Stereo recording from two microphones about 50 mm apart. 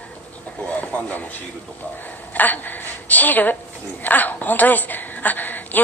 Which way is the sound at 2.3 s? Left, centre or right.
Left.